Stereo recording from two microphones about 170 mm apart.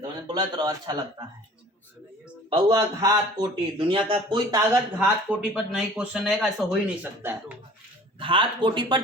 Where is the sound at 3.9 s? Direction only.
30° right (ahead or behind); by 6.8 s centre (ahead or behind).